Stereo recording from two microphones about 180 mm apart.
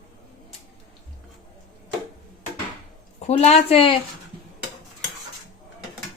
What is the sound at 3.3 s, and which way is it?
Speech, 40° left (ahead or behind).